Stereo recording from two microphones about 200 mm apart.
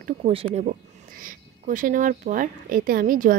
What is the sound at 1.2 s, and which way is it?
A woman's voice, 40° right (ahead or behind).